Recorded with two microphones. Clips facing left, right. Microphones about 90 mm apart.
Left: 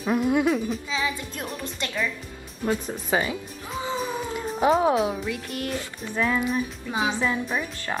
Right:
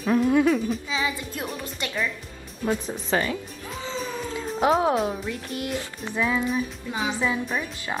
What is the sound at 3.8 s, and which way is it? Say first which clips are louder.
Music: left 2 dB; 15° left (ahead or behind).